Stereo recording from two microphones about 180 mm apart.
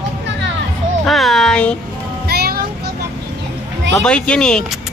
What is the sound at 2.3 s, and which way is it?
Child singing, 60° right (ahead or behind).